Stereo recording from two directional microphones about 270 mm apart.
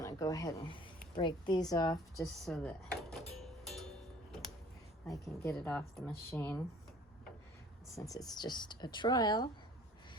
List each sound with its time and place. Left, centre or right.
0.0 s a sound: centre
1.1 s speech: centre
2.2 s music: centre
5.5 s speech: centre
7.9 s speech: centre